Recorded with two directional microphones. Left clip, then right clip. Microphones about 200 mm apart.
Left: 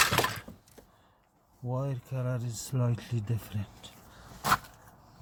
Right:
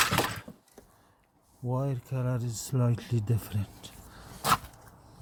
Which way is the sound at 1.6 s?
30° right (ahead or behind).